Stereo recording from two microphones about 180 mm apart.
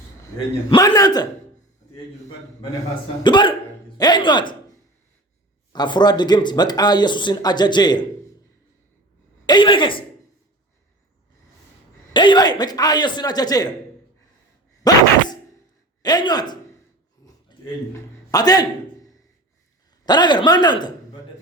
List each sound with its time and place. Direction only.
0.7 s speech: 20° left (ahead or behind)
3.2 s speech: 25° left (ahead or behind)
5.7 s speech: 25° left (ahead or behind)
9.5 s speech: 25° left (ahead or behind)
12.1 s speech: 25° left (ahead or behind)
14.8 s speech: 20° left (ahead or behind)
16.0 s speech: 20° left (ahead or behind)
17.2 s a sound: 20° left (ahead or behind)
18.3 s a man's voice: 20° left (ahead or behind)
20.1 s speech: 25° left (ahead or behind)